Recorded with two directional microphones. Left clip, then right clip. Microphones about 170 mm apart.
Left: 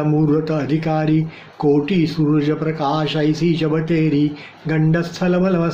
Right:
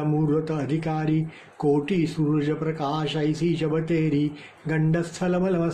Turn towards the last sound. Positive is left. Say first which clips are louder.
# left 6 dB
turn(degrees=-10)  # may be behind; listen again after turning